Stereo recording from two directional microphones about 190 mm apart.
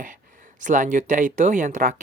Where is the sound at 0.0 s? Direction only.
45° right (ahead or behind).